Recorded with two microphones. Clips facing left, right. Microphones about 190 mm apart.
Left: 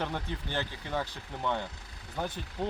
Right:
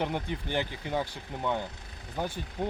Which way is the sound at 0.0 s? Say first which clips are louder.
Right 3 dB; 15° right (ahead or behind).